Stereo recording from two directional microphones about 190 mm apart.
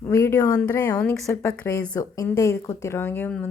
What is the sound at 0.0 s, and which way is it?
Speech, 15° left (ahead or behind).